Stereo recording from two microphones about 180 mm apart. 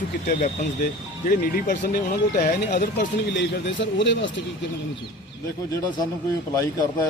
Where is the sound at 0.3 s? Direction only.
50° left (ahead or behind).